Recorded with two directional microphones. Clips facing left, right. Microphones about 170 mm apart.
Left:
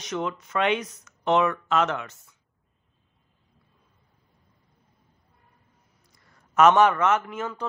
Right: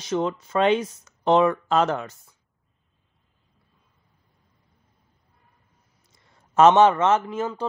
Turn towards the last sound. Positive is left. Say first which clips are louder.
# right 4 dB
turn(degrees=-30)  # may be behind; listen again after turning